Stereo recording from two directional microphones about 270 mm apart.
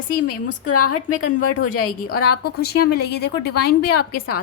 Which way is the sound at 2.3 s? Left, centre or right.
Left.